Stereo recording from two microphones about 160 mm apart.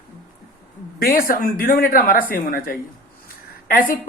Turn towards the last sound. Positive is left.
turn(degrees=60)  # may be behind; listen again after turning